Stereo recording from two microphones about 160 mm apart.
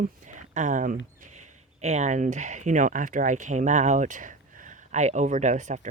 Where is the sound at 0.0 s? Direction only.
50° right (ahead or behind).